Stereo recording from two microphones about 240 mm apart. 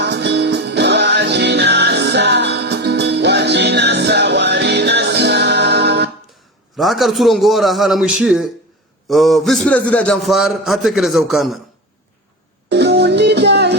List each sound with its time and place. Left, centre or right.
0.0 s music: right
6.7 s a man's voice: centre
12.6 s music: right